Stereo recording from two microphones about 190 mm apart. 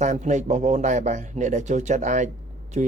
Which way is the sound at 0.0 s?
40° right (ahead or behind).